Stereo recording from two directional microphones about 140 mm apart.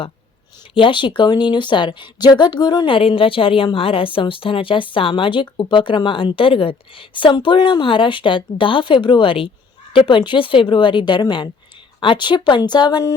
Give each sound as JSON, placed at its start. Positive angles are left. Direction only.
{"t": 0.7, "sound": "speech", "side_deg": 35}